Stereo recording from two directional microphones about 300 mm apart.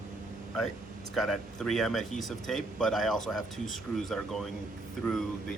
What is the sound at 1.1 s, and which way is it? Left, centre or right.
Speech, centre.